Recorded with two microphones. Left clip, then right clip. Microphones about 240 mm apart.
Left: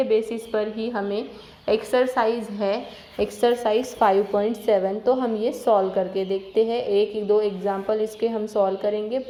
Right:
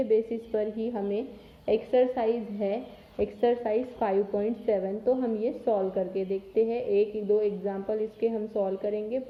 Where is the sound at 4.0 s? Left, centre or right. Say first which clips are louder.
Left 10 dB; left.